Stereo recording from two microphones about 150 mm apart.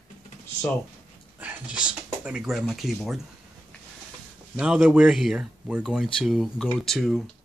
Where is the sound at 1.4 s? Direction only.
10° right (ahead or behind).